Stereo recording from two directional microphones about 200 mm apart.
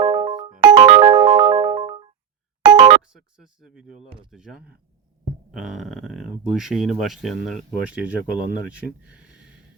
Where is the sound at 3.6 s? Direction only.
5° right (ahead or behind).